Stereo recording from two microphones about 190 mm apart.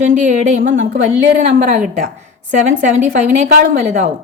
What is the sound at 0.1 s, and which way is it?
Speech, 40° right (ahead or behind).